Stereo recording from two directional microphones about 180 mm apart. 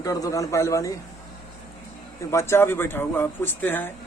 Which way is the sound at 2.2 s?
15° left (ahead or behind).